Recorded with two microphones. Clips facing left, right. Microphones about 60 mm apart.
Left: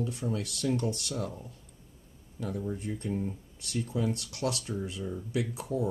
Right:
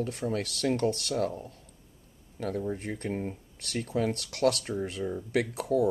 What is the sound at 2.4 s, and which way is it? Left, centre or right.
Speech, right.